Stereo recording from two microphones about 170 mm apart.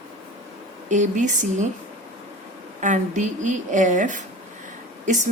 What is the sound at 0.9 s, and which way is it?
Speech, 45° right (ahead or behind).